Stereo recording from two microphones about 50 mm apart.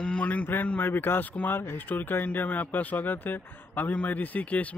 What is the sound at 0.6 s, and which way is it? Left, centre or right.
Speech, left.